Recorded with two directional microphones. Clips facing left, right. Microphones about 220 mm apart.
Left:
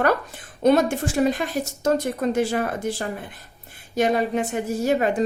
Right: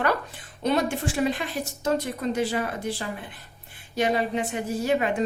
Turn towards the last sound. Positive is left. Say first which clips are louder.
# left 3 dB
turn(degrees=45)  # may be behind; listen again after turning